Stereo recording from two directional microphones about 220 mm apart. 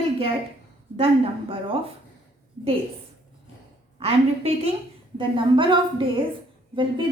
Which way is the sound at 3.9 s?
25° right (ahead or behind).